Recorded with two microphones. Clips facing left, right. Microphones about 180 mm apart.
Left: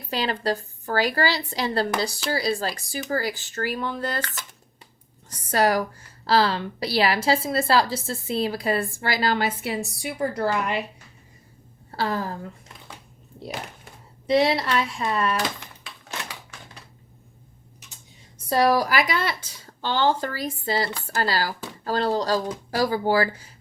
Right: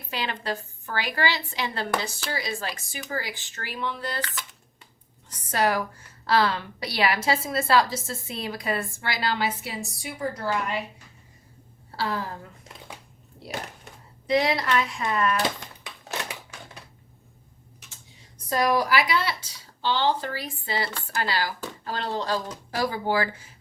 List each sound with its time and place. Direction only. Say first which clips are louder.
0.1 s a woman's voice: left 5 dB; 40° left (ahead or behind)
5.5 s a woman's voice: left 3 dB; 40° left (ahead or behind); by 10.8 s 65° left (ahead or behind)
11.9 s a woman's voice: left 3 dB; 45° left (ahead or behind)
14.3 s a woman's voice: left 3 dB; 25° left (ahead or behind)
18.4 s a woman's voice: left 3 dB; 30° left (ahead or behind)